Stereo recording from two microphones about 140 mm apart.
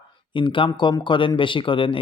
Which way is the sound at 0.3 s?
35° left (ahead or behind).